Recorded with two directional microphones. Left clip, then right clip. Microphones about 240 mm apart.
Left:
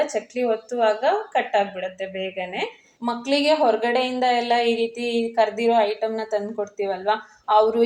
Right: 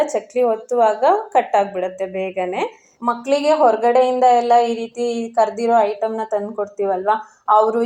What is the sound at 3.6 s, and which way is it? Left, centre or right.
Speech, right.